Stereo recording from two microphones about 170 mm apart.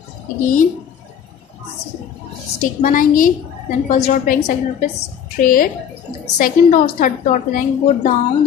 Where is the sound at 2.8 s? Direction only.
50° left (ahead or behind).